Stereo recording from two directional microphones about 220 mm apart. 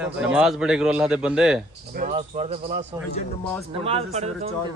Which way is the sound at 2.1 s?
30° right (ahead or behind).